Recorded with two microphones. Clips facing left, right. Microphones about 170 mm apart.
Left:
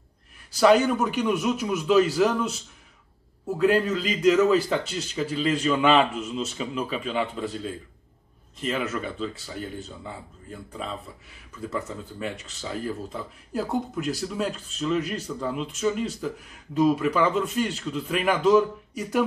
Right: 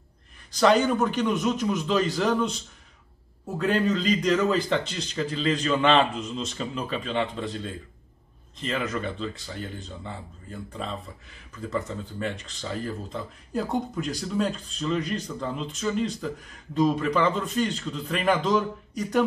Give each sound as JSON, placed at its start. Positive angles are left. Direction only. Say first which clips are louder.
{"t": 0.5, "sound": "speech", "louder": "left 2 dB", "side_deg": 5}